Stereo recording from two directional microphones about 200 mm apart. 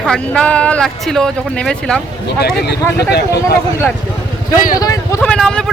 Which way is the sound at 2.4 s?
55° left (ahead or behind).